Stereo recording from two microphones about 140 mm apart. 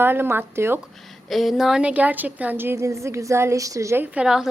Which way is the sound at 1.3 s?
Centre (ahead or behind).